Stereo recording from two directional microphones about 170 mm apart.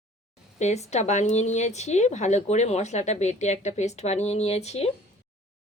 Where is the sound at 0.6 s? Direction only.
40° left (ahead or behind).